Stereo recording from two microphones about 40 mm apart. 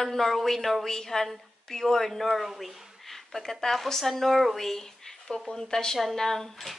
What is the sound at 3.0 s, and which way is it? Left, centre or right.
Speech, centre.